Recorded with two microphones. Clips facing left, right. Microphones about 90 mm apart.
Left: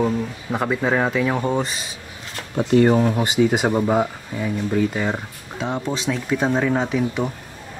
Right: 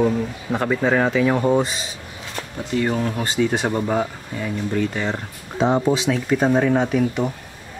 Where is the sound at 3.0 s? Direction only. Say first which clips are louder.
Left 3 dB; 15° left (ahead or behind).